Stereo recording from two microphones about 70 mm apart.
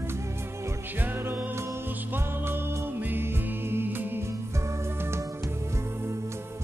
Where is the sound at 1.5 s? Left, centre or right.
Right.